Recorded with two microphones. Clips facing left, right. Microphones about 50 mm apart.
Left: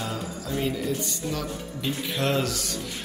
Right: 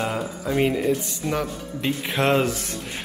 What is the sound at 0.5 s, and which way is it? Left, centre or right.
Speech, right.